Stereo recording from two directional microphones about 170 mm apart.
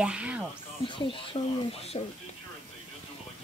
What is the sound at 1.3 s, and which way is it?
Speech, 35° left (ahead or behind).